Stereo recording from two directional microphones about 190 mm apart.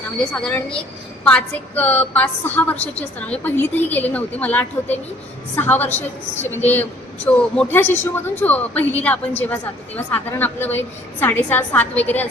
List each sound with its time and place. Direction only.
0.2 s a woman's voice: 5° left (ahead or behind)
2.7 s a woman's voice: 35° left (ahead or behind)
3.2 s a woman's voice: 5° left (ahead or behind)
7.3 s a woman's voice: 5° left (ahead or behind)